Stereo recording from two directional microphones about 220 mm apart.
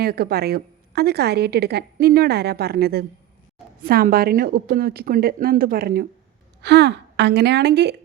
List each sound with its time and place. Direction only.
0.0 s a woman's voice: 45° right (ahead or behind)